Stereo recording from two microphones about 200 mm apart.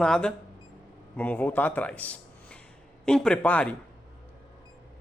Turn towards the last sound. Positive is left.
turn(degrees=5)  # may be behind; listen again after turning